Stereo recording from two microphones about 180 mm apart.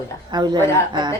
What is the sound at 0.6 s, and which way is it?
Speech, 15° left (ahead or behind).